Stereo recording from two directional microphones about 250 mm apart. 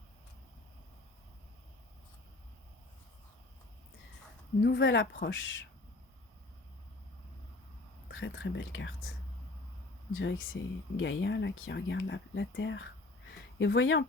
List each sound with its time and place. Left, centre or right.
4.6 s speech: left
8.0 s speech: left
10.2 s speech: left